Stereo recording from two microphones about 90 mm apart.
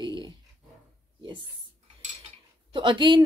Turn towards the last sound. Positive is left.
turn(degrees=-60)  # may be behind; listen again after turning